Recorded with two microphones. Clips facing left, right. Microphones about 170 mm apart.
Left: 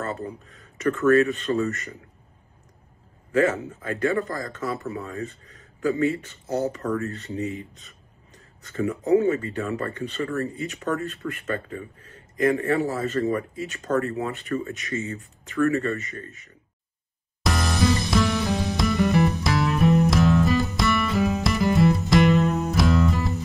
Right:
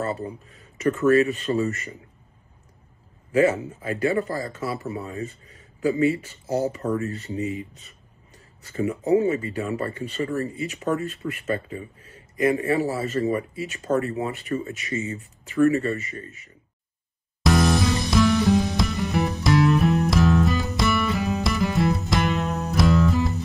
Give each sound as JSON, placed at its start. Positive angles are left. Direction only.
{"t": 0.0, "sound": "speech", "side_deg": -15}
{"t": 3.3, "sound": "a man's voice", "side_deg": -10}
{"t": 9.1, "sound": "speech", "side_deg": -10}
{"t": 17.4, "sound": "music", "side_deg": 0}